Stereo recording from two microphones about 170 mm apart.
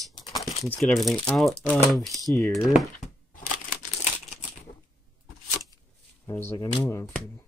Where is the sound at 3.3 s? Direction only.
60° left (ahead or behind).